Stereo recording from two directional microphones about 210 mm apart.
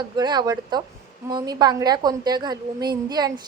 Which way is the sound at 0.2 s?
20° right (ahead or behind).